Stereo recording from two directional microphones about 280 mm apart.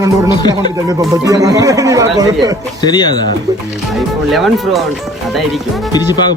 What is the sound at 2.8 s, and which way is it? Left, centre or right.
Speech, centre.